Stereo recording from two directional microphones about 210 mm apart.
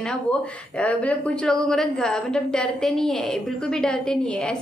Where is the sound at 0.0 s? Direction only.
5° left (ahead or behind).